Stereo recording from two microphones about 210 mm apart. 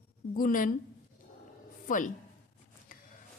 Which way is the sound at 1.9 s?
40° left (ahead or behind).